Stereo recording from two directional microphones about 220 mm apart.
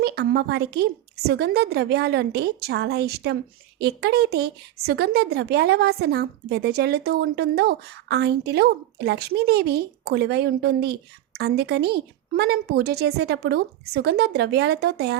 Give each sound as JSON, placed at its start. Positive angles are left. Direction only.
{"t": 0.0, "sound": "speech", "side_deg": -50}